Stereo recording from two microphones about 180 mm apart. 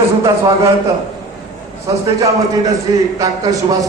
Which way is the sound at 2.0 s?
20° right (ahead or behind).